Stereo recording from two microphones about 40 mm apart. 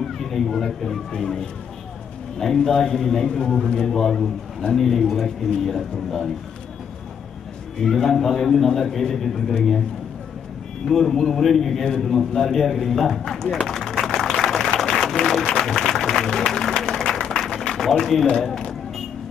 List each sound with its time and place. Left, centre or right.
0.0 s a man's voice: centre
7.8 s a man's voice: centre
10.9 s a man's voice: centre
13.7 s a sound: centre
15.4 s music: centre
17.3 s a sound: centre